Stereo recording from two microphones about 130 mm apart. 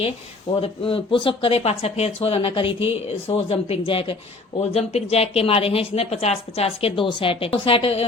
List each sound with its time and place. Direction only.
0.6 s a woman's voice: 45° left (ahead or behind)
4.7 s a woman's voice: 55° left (ahead or behind)